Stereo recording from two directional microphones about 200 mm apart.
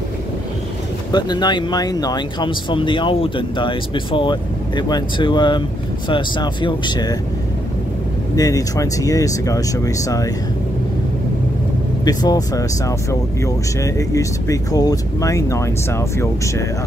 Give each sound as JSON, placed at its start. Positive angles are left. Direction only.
{"t": 1.1, "sound": "speech", "side_deg": 20}
{"t": 8.4, "sound": "speech", "side_deg": 15}
{"t": 12.0, "sound": "speech", "side_deg": 20}